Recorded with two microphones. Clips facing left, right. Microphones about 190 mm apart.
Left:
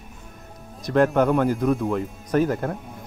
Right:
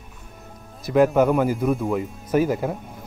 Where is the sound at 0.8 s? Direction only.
5° right (ahead or behind).